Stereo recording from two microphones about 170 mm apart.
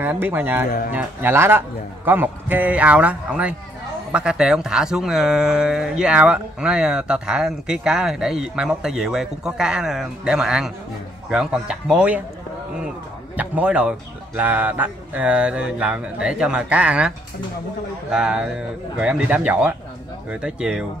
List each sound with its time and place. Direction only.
0.0 s speech: 10° right (ahead or behind)
0.7 s speech: 55° left (ahead or behind)
0.9 s speech: 15° right (ahead or behind)
13.4 s speech: 10° right (ahead or behind)
18.1 s speech: 5° right (ahead or behind)